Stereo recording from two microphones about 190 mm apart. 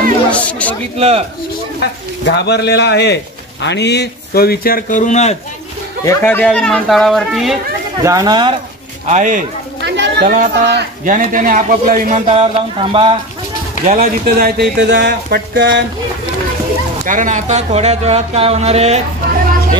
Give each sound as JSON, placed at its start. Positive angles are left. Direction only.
{"t": 0.3, "sound": "speech", "side_deg": 5}
{"t": 0.9, "sound": "speech", "side_deg": -30}
{"t": 2.2, "sound": "a man's voice", "side_deg": 60}
{"t": 6.0, "sound": "speech", "side_deg": 10}
{"t": 8.0, "sound": "speech", "side_deg": -20}
{"t": 9.0, "sound": "speech", "side_deg": -40}
{"t": 9.8, "sound": "chatter", "side_deg": -65}
{"t": 10.3, "sound": "a man's voice", "side_deg": -45}
{"t": 12.3, "sound": "speech", "side_deg": -30}
{"t": 13.8, "sound": "a man's voice", "side_deg": -50}
{"t": 14.9, "sound": "speech", "side_deg": -65}
{"t": 17.0, "sound": "speech", "side_deg": -45}